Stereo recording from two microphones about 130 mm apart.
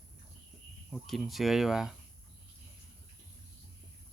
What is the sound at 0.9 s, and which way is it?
Speech, centre (ahead or behind).